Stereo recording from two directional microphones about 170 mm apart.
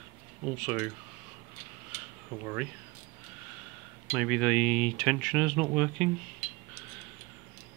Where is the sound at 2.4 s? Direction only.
10° right (ahead or behind).